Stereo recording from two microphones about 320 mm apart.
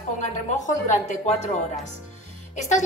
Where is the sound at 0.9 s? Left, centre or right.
Left.